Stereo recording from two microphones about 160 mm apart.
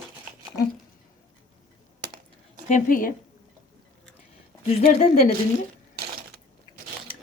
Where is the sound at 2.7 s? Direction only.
55° left (ahead or behind).